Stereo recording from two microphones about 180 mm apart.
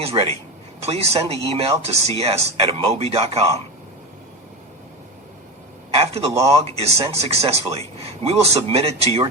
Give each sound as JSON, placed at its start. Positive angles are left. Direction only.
{"t": 0.0, "sound": "speech", "side_deg": -35}
{"t": 5.9, "sound": "speech", "side_deg": -35}